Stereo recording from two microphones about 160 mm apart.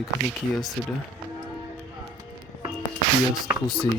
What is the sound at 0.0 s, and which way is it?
Speech, centre (ahead or behind).